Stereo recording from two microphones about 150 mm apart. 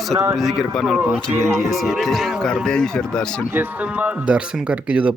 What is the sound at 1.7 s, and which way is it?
Speech, centre (ahead or behind).